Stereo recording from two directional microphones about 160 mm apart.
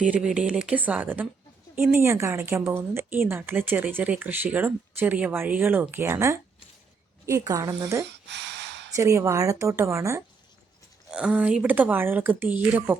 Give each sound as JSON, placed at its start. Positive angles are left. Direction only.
{"t": 0.0, "sound": "a woman's voice", "side_deg": -5}
{"t": 8.0, "sound": "a sound", "side_deg": -90}
{"t": 9.0, "sound": "a woman's voice", "side_deg": -20}
{"t": 11.1, "sound": "speech", "side_deg": -5}